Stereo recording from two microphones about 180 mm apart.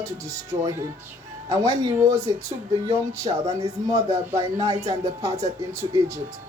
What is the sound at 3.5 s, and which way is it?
A woman's voice, 20° right (ahead or behind).